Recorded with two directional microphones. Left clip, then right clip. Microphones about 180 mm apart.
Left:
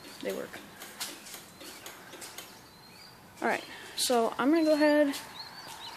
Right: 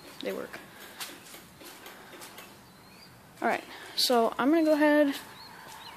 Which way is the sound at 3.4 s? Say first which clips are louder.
Right 1 dB; 10° right (ahead or behind).